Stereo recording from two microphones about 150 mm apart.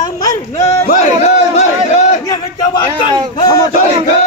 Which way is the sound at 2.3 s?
30° left (ahead or behind).